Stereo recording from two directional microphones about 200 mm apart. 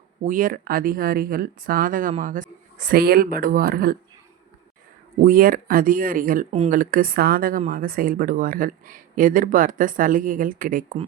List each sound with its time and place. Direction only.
0.3 s speech: 40° right (ahead or behind)
5.2 s speech: 45° right (ahead or behind)